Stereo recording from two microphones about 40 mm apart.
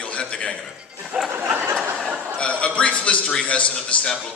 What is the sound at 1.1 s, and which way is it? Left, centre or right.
Speech, right.